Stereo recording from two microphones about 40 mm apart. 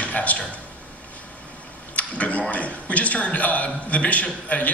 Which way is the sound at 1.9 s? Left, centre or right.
Left.